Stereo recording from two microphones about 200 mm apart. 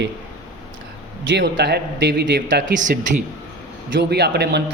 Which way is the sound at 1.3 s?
60° right (ahead or behind).